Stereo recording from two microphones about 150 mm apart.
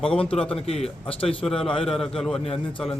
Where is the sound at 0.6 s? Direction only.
40° left (ahead or behind).